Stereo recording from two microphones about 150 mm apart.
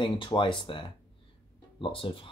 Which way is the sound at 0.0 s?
35° left (ahead or behind).